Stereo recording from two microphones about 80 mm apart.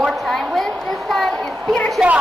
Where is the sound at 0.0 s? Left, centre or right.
Centre.